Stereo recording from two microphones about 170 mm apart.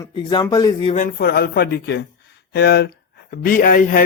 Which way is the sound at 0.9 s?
55° left (ahead or behind).